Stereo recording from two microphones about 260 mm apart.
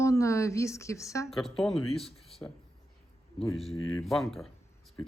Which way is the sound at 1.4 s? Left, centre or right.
Centre.